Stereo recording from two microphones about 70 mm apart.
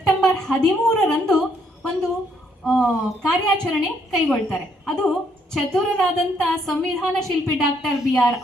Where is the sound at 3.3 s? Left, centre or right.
Centre.